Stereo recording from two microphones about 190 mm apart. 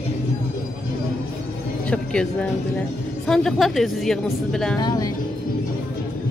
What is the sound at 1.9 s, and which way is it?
A woman's voice, 5° left (ahead or behind).